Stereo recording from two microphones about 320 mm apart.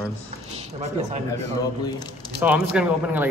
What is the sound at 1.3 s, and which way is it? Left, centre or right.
Speech, centre.